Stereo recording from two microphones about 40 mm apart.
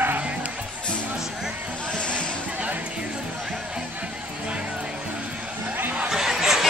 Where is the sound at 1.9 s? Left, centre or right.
Left.